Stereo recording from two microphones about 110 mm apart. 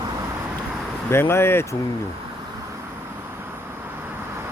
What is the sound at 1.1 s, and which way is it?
Speech, 25° left (ahead or behind).